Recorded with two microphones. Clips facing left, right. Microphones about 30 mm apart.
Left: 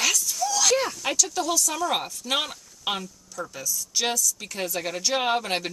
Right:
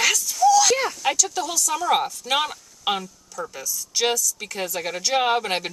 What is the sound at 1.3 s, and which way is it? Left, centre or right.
Speech, centre.